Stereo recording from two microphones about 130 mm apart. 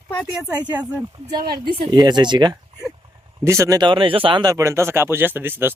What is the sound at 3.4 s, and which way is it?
Speech, 20° right (ahead or behind).